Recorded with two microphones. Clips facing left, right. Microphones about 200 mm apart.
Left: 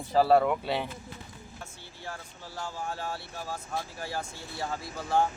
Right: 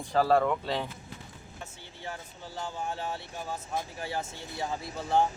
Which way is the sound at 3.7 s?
20° right (ahead or behind).